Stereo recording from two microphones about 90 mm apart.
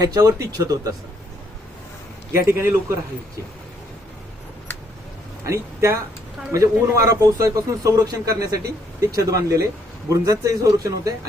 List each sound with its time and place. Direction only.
0.0 s a man's voice: 45° right (ahead or behind)
2.5 s a man's voice: 30° right (ahead or behind)
5.5 s a man's voice: 35° right (ahead or behind)